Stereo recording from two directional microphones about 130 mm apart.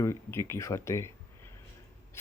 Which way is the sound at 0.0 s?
20° left (ahead or behind).